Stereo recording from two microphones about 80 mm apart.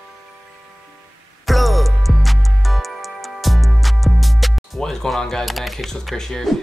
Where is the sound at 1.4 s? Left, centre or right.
Centre.